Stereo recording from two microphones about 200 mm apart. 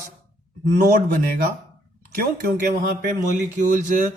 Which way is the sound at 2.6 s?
45° right (ahead or behind).